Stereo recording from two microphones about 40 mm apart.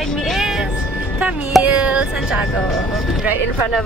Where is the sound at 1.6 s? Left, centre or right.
Right.